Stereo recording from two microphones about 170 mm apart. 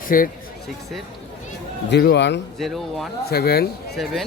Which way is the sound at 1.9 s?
85° left.